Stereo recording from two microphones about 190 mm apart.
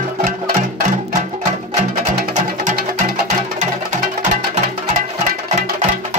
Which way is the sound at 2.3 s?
40° right (ahead or behind).